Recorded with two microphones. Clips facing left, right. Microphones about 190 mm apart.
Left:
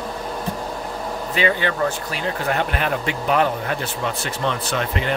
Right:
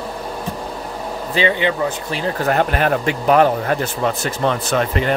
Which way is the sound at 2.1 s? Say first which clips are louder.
Right 4 dB; 35° right (ahead or behind).